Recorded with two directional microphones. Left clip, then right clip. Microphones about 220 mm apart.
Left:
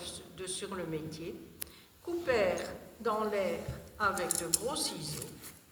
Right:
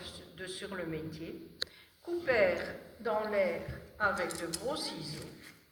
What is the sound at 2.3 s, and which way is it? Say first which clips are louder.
A woman's voice: right 2 dB; 55° left (ahead or behind).